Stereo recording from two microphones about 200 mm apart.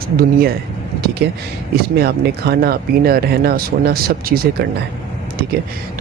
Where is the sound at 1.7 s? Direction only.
50° right (ahead or behind).